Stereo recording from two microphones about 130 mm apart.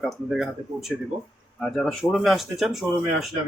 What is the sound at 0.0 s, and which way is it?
Speech, centre (ahead or behind).